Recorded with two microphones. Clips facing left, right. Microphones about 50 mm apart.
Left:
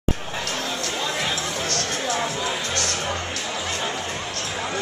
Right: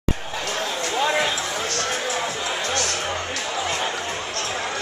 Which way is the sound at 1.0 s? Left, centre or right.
Centre.